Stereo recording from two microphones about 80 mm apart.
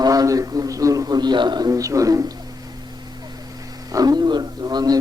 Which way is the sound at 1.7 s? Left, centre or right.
Right.